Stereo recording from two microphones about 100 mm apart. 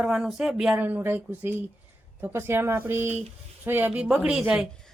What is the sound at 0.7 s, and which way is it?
Speech, 20° right (ahead or behind).